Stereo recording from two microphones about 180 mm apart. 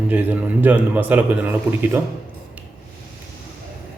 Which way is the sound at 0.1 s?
10° right (ahead or behind).